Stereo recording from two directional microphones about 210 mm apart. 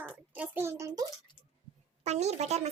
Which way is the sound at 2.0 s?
30° right (ahead or behind).